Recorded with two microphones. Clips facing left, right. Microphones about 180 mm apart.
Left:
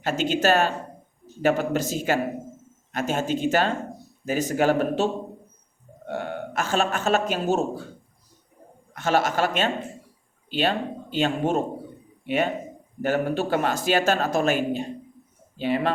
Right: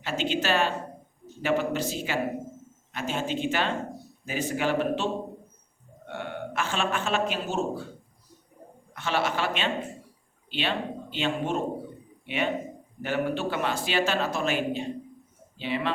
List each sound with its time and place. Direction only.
0.0 s speech: 45° left (ahead or behind)
6.1 s a man's voice: 40° left (ahead or behind)
8.9 s speech: 45° left (ahead or behind)